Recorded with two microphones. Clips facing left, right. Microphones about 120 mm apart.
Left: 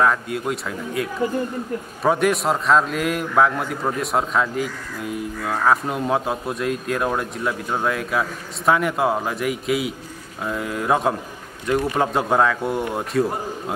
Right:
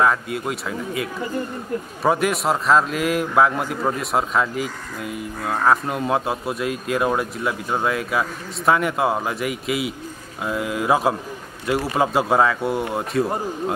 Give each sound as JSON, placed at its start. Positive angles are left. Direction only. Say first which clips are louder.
{"t": 0.0, "sound": "speech", "louder": "even", "side_deg": 0}
{"t": 2.0, "sound": "speech", "louder": "left 1 dB", "side_deg": 0}